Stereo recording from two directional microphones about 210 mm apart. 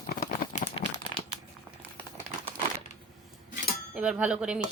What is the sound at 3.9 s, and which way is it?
Dishes, 5° right (ahead or behind).